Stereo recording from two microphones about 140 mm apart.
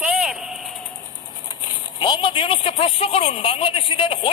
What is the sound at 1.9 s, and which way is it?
Speech, 35° left (ahead or behind).